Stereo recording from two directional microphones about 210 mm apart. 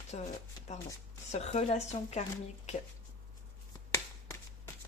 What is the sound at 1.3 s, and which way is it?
Speech, 30° left (ahead or behind).